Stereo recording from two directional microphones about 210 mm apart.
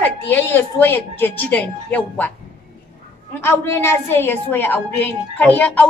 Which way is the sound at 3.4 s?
10° left (ahead or behind).